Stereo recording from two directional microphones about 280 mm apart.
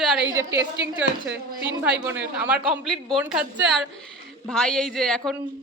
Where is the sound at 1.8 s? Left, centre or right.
Centre.